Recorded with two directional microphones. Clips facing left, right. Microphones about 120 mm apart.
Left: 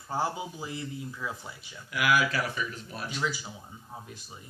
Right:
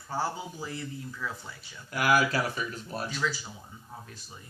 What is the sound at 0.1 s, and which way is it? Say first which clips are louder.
A man's voice: left 1 dB; 15° left (ahead or behind).